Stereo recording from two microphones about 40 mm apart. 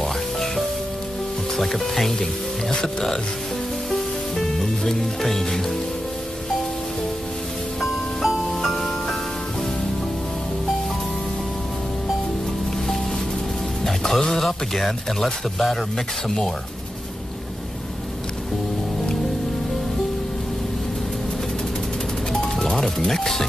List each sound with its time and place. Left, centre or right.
0.0 s music: centre
1.6 s speech: centre
3.9 s music: centre
7.8 s music: centre
13.8 s speech: centre
22.3 s music: centre
22.8 s speech: centre